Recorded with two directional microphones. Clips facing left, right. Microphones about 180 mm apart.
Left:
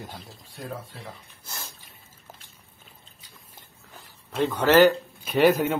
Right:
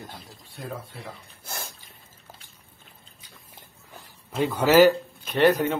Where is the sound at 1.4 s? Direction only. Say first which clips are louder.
Right 4 dB; 55° right (ahead or behind).